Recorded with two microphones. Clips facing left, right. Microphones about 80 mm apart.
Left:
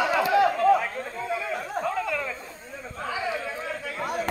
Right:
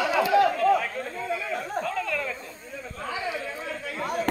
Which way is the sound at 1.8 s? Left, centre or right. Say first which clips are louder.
Left 1 dB; centre.